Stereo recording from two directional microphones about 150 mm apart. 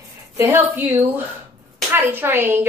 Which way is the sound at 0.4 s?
15° right (ahead or behind).